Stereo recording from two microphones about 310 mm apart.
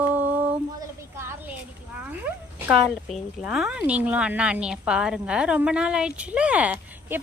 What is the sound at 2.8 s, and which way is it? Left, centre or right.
Speech, centre.